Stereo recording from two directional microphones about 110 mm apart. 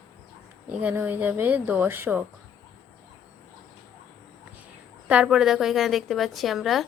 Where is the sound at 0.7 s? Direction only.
15° right (ahead or behind).